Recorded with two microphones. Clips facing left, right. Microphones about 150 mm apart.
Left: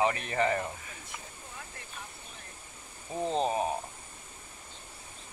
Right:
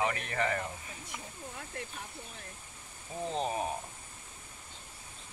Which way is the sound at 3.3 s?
25° left (ahead or behind).